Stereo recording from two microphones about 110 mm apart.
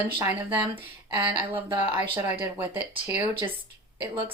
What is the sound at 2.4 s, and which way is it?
Speech, 15° right (ahead or behind).